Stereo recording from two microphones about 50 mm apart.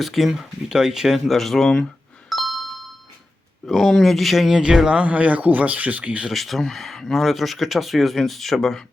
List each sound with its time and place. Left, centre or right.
0.0 s speech: centre
2.3 s ding: centre
3.7 s speech: centre
4.9 s speech: right
6.3 s speech: centre